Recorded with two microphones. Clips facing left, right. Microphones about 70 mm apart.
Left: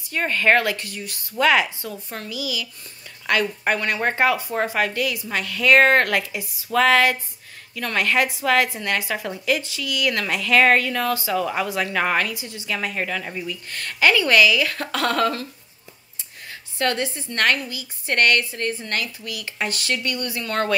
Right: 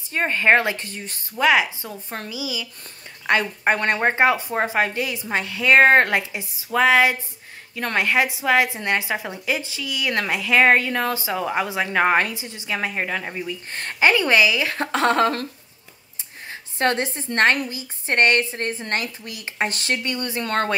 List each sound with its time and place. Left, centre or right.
0.1 s a woman's voice: right
1.3 s speech: centre
1.8 s a woman's voice: right
7.7 s a woman's voice: right
16.7 s a woman's voice: right
20.0 s a woman's voice: right